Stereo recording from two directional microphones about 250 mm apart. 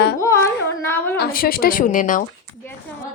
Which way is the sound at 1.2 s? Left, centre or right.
Left.